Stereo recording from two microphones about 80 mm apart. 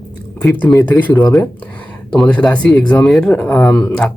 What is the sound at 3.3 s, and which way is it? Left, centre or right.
Speech, centre.